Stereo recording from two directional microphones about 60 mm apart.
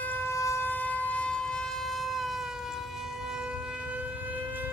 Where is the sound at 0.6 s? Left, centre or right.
Left; by 1.6 s centre.